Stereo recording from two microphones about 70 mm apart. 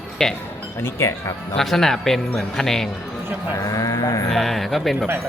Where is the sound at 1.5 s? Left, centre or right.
Centre.